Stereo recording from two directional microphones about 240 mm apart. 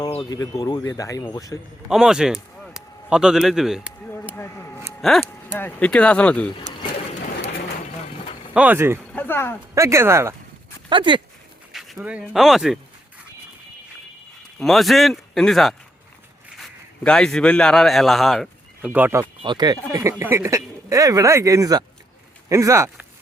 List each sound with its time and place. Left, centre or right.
0.0 s speech: centre
1.9 s speech: centre
4.4 s a sound: centre
4.9 s speech: centre
8.5 s speech: centre
9.1 s speech: centre
9.7 s speech: centre
11.7 s speech: centre
14.6 s a man's voice: centre
19.4 s speech: centre